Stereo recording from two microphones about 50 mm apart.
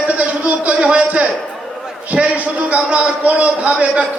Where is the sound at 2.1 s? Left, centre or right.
Right.